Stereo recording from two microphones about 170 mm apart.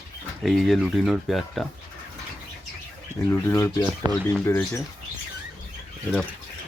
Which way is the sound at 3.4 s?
15° left (ahead or behind).